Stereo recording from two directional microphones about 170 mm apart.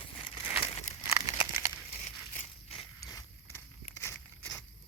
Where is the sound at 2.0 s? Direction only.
45° left (ahead or behind).